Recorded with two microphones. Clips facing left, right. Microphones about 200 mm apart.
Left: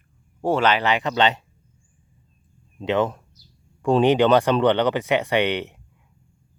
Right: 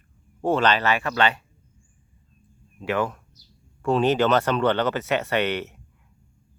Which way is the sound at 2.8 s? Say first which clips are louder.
Left 4 dB; 20° left (ahead or behind).